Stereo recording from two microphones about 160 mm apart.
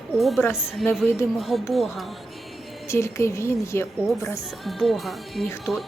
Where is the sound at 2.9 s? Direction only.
15° left (ahead or behind).